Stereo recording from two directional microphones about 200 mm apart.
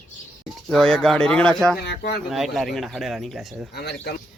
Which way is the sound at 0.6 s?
5° left (ahead or behind).